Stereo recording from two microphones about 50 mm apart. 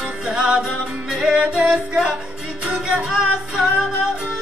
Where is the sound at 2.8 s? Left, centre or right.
Centre.